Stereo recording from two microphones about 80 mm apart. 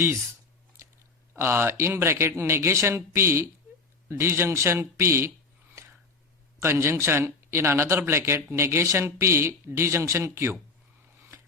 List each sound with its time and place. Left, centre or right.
1.4 s a man's voice: right
6.6 s a man's voice: right